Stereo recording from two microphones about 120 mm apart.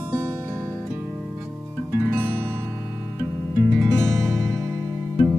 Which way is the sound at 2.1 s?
15° right (ahead or behind).